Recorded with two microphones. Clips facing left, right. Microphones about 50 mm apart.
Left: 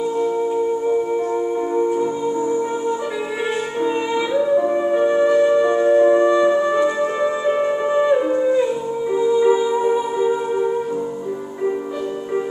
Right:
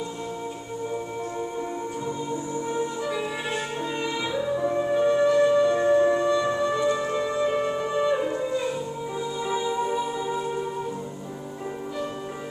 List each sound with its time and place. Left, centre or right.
3.8 s music: left